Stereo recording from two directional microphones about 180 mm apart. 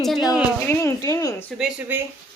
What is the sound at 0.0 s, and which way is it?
Speech, centre (ahead or behind).